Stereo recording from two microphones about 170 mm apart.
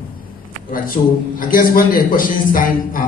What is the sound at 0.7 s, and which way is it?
A man's voice, 55° left (ahead or behind).